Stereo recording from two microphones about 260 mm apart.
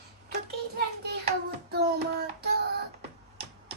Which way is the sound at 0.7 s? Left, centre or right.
Right.